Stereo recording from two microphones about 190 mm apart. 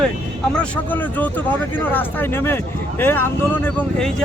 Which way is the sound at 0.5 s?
5° left (ahead or behind).